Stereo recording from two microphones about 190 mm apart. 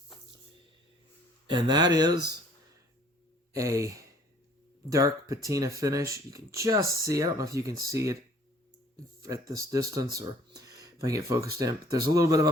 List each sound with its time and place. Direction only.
1.5 s speech: 25° right (ahead or behind)
3.5 s speech: 15° right (ahead or behind)
9.5 s speech: 15° right (ahead or behind)